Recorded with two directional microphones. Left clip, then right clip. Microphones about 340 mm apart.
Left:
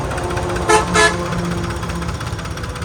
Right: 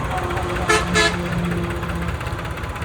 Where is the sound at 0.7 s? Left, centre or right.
Left.